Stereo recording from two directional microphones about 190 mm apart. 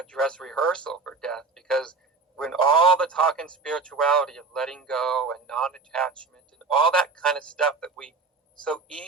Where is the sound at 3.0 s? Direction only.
5° left (ahead or behind).